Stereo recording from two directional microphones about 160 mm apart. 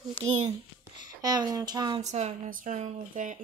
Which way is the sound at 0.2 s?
30° right (ahead or behind).